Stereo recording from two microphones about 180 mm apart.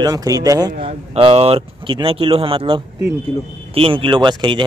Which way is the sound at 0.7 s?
35° right (ahead or behind).